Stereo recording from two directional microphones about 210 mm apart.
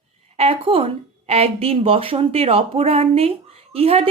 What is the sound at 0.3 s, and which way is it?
A woman's voice, 25° right (ahead or behind).